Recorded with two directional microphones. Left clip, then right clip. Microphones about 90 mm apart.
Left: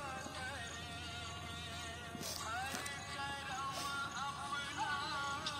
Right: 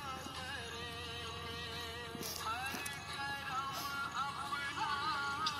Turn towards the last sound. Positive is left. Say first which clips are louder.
# right 4 dB
turn(degrees=25)  # may be behind; listen again after turning